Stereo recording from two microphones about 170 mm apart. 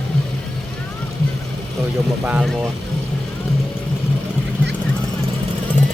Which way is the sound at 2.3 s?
5° right (ahead or behind).